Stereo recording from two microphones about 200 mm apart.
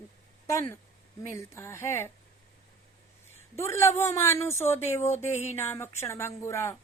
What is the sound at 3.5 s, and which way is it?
Speech, 15° left (ahead or behind).